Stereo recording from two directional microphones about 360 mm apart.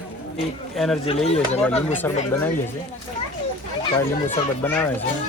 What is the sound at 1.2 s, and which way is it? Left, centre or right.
Speech, centre.